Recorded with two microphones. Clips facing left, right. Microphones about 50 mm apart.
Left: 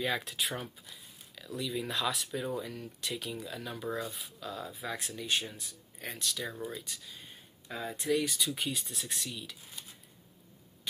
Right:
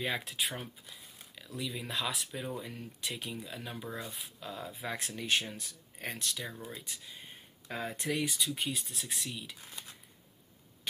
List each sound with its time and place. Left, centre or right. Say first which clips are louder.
0.2 s speech: left 1 dB; centre
2.6 s speech: left 1 dB; centre
4.0 s speech: left 3 dB; right
4.7 s speech: even; right
8.4 s speech: left 1 dB; centre